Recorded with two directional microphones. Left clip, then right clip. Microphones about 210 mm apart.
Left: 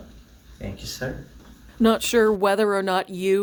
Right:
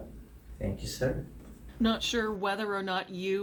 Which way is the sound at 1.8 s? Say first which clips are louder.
Left 11 dB; 60° left (ahead or behind).